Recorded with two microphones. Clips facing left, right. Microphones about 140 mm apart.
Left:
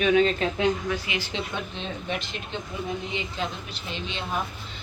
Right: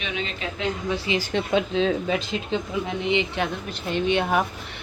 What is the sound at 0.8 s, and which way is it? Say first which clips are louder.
Speech: right 4 dB; 30° right (ahead or behind).